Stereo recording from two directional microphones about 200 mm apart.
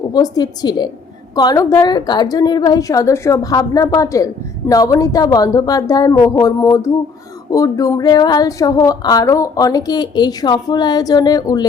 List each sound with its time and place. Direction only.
0.1 s a woman's voice: 20° left (ahead or behind)